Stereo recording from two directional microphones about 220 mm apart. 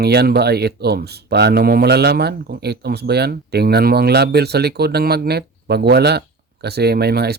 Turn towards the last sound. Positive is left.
turn(degrees=-45)  # may be behind; listen again after turning